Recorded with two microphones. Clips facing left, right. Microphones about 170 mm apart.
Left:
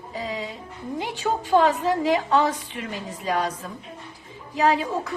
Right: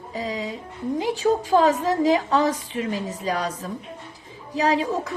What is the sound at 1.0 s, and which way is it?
A woman's voice, 40° right (ahead or behind).